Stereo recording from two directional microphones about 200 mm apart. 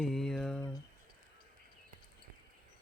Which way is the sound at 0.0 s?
Centre (ahead or behind).